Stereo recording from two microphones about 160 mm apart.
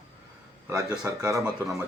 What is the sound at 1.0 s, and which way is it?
Speech, 20° right (ahead or behind).